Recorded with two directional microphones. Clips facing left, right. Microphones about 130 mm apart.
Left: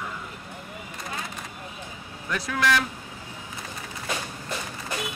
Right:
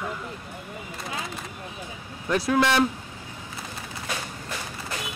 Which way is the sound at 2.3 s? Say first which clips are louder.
Right 3 dB; 30° right (ahead or behind).